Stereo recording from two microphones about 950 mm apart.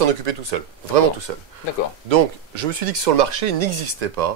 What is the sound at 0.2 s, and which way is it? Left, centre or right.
Speech, right.